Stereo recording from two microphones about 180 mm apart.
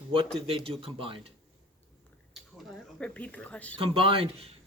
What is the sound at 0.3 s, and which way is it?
Speech, 30° right (ahead or behind).